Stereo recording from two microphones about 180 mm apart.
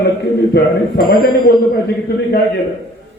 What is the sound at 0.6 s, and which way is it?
Speech, 65° left (ahead or behind).